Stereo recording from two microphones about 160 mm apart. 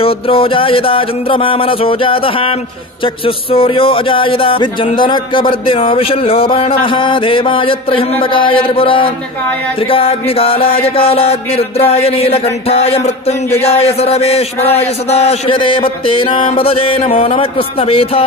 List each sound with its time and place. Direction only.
0.0 s speech: 35° left (ahead or behind)